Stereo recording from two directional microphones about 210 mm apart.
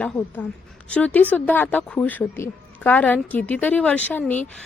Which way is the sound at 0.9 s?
5° left (ahead or behind).